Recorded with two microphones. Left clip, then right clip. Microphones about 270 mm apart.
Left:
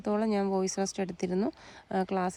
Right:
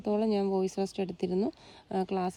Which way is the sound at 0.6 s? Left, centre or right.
Centre.